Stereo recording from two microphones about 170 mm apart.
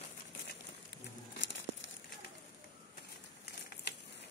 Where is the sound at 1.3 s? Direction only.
90° left.